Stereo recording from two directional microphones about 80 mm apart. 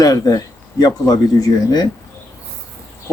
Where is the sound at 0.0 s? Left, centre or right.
Left.